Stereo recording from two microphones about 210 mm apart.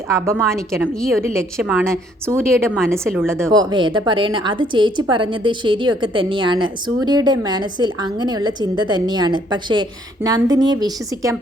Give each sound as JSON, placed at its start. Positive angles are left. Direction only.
{"t": 0.3, "sound": "a woman's voice", "side_deg": 0}
{"t": 1.2, "sound": "a woman's voice", "side_deg": -15}